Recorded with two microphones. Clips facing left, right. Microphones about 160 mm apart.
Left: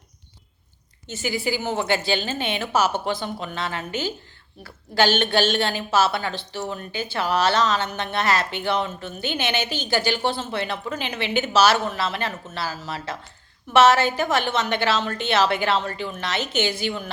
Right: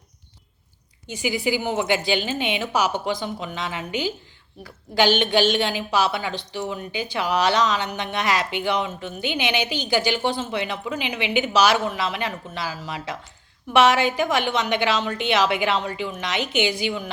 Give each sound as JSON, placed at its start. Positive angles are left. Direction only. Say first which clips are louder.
{"t": 1.0, "sound": "a woman's voice", "louder": "right 2 dB", "side_deg": -15}